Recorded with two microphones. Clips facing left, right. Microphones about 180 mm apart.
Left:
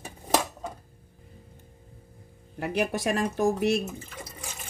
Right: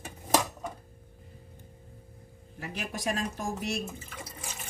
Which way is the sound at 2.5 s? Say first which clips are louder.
Left 10 dB; 65° left (ahead or behind).